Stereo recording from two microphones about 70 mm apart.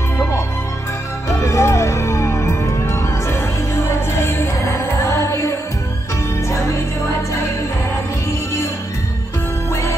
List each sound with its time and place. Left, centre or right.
1.3 s music: left